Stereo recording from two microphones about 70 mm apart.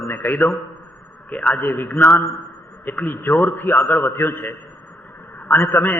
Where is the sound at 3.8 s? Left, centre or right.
Left.